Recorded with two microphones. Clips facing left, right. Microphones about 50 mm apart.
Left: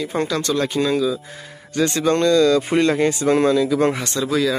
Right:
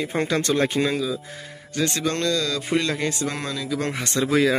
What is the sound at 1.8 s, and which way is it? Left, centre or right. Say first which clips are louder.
A man's voice: left 6 dB; centre.